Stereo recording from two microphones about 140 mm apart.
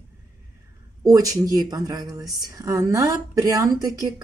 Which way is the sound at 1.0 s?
25° right (ahead or behind).